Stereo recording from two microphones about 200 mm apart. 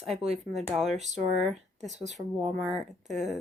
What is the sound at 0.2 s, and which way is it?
Speech, 35° right (ahead or behind).